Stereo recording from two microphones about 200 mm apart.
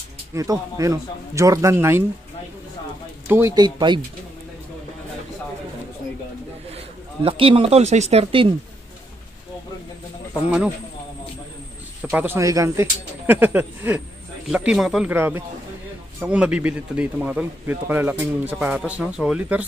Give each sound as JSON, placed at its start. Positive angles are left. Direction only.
{"t": 0.3, "sound": "a man's voice", "side_deg": -15}
{"t": 3.3, "sound": "speech", "side_deg": -15}
{"t": 7.2, "sound": "speech", "side_deg": -25}
{"t": 12.0, "sound": "a man's voice", "side_deg": -10}